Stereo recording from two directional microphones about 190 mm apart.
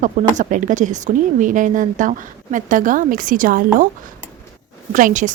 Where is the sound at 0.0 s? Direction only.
40° right (ahead or behind).